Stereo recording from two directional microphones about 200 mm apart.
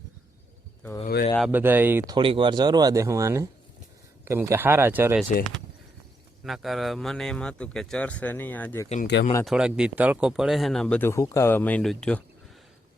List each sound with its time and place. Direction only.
1.0 s speech: 45° left (ahead or behind)
1.4 s speech: 10° right (ahead or behind)
2.1 s speech: 25° right (ahead or behind); by 5.2 s 10° right (ahead or behind)
6.4 s speech: centre (ahead or behind)
9.4 s speech: centre (ahead or behind)